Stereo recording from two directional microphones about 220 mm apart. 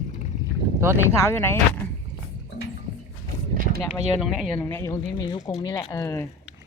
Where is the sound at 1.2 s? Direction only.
10° left (ahead or behind).